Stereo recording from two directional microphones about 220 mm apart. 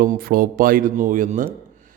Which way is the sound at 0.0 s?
40° right (ahead or behind).